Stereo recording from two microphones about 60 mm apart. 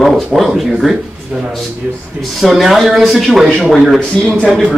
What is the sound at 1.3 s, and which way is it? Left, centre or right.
Speech, right.